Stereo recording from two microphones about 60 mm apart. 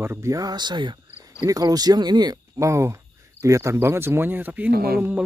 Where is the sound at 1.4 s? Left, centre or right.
Right.